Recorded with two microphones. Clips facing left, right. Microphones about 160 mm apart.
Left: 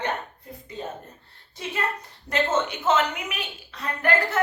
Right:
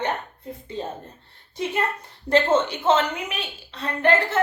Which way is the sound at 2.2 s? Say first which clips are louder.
Right 5 dB; 30° right (ahead or behind).